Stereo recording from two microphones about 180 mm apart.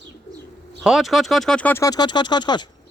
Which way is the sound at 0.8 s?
Centre (ahead or behind).